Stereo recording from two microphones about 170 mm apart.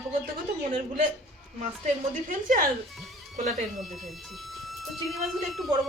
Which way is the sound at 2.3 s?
50° right (ahead or behind).